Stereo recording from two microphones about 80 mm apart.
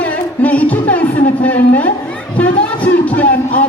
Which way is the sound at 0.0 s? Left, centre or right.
Centre.